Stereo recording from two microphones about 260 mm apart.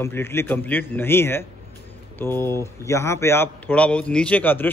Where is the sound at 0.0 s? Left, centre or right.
Centre.